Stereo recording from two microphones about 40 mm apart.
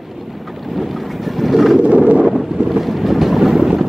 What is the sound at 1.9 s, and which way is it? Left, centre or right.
Wind noise, right.